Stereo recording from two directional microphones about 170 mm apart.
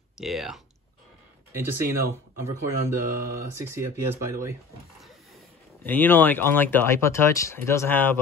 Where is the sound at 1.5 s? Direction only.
15° right (ahead or behind).